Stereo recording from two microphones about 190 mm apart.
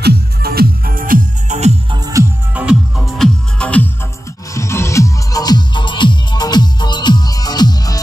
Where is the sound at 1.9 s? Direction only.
20° right (ahead or behind).